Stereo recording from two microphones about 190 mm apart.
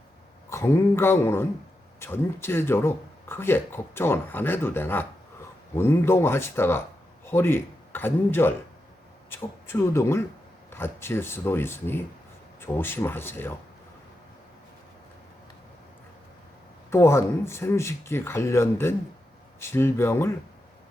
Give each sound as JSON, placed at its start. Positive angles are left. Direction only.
{"t": 0.5, "sound": "a man's voice", "side_deg": 15}
{"t": 16.9, "sound": "speech", "side_deg": 15}